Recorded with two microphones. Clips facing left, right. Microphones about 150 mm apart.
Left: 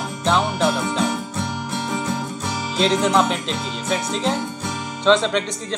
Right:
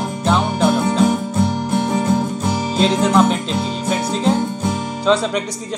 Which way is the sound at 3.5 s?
35° right (ahead or behind).